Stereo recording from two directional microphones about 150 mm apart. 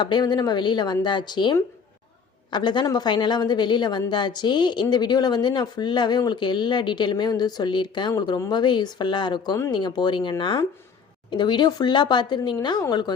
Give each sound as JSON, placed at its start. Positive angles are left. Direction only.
{"t": 0.0, "sound": "speech", "side_deg": 30}